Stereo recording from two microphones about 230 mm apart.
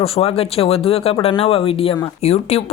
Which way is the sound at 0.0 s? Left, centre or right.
Left.